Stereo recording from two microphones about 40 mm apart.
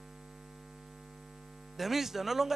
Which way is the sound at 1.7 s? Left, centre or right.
Centre.